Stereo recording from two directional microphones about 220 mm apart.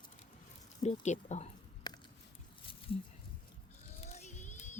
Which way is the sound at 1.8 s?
20° left (ahead or behind).